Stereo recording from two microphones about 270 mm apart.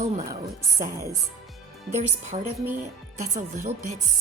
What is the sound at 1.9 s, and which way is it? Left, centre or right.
Speech, right.